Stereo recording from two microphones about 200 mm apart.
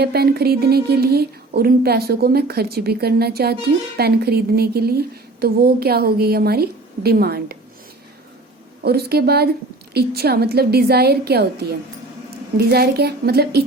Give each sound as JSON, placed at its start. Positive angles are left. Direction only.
{"t": 0.0, "sound": "a woman's voice", "side_deg": -55}
{"t": 8.8, "sound": "a woman's voice", "side_deg": -50}